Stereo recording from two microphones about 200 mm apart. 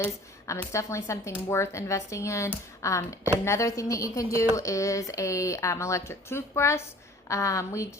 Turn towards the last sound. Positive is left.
turn(degrees=15)  # may be behind; listen again after turning